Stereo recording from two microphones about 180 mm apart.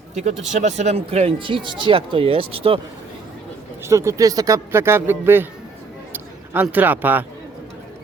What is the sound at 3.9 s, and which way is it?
A man's voice, 15° right (ahead or behind).